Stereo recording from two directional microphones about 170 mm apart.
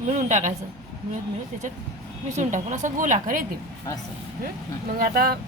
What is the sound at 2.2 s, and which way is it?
A woman's voice, 45° right (ahead or behind).